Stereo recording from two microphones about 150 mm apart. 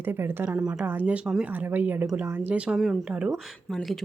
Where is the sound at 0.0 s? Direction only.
15° right (ahead or behind).